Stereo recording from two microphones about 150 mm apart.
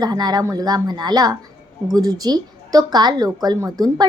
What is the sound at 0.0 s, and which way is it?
Speech, 25° right (ahead or behind).